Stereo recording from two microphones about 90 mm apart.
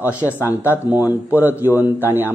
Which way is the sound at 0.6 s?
20° right (ahead or behind).